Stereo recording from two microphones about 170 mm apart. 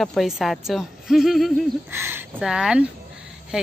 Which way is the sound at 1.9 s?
15° right (ahead or behind).